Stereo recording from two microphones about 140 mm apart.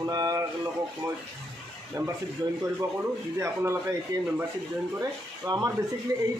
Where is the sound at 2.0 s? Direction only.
25° right (ahead or behind).